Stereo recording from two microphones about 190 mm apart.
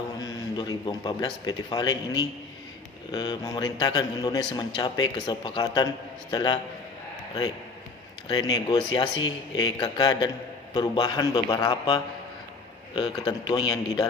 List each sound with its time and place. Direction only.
0.2 s a man's voice: 20° left (ahead or behind)
8.3 s a man's voice: 20° left (ahead or behind)